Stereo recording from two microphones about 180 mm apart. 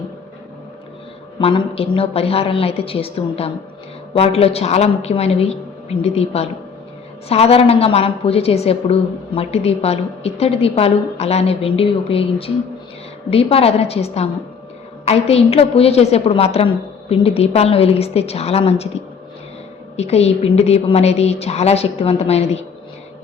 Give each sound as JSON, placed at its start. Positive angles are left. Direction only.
{"t": 1.4, "sound": "a woman's voice", "side_deg": 30}
{"t": 20.0, "sound": "a woman's voice", "side_deg": 35}